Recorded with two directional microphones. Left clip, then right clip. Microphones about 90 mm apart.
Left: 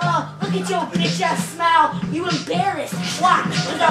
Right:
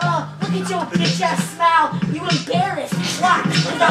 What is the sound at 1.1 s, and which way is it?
Speech, centre (ahead or behind).